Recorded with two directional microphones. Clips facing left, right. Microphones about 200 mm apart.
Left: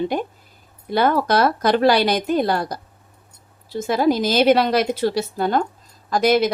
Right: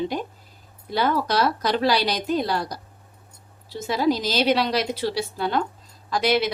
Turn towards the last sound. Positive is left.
turn(degrees=45)  # may be behind; listen again after turning